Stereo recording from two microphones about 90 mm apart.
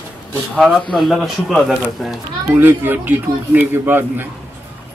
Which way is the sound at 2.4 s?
25° right (ahead or behind).